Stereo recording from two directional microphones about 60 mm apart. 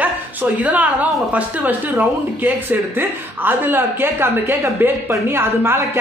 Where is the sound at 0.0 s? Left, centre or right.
Right.